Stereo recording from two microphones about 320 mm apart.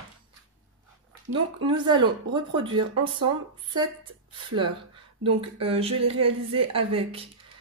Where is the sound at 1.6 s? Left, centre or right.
Centre.